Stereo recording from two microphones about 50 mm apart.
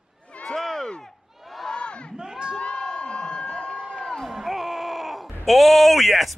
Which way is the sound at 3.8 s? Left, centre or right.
Centre.